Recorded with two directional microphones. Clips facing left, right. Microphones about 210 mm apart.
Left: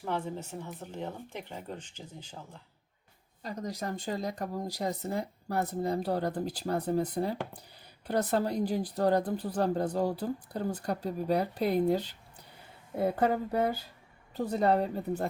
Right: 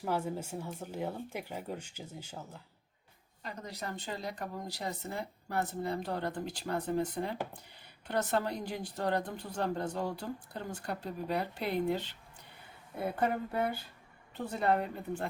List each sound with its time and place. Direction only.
0.0 s speech: 5° right (ahead or behind)
3.4 s speech: 40° left (ahead or behind)
13.1 s speech: 40° left (ahead or behind)